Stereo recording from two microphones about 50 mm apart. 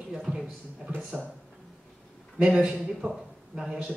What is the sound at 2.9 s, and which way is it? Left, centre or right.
A man's voice, centre.